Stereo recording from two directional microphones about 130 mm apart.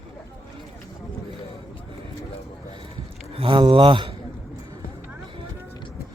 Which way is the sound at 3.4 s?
40° right (ahead or behind).